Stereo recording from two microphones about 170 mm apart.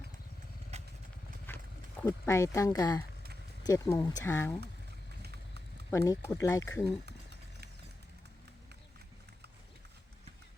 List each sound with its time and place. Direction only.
0.7 s motorcycle: 40° right (ahead or behind)
1.5 s horse: 15° left (ahead or behind)
2.0 s speech: 15° left (ahead or behind)
5.9 s speech: 20° left (ahead or behind)
7.0 s a sound: 80° right